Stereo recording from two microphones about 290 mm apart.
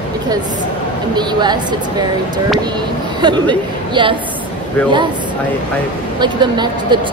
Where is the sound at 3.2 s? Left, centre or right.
Centre.